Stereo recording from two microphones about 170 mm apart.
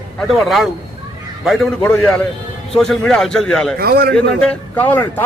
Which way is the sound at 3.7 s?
65° right (ahead or behind).